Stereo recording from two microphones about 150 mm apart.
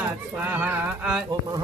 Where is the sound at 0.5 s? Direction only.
15° right (ahead or behind).